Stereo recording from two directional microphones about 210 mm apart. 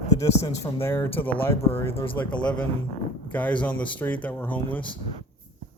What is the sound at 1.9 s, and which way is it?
Speech, 25° left (ahead or behind).